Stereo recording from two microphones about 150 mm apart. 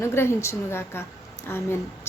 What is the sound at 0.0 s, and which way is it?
A woman's voice, 15° left (ahead or behind).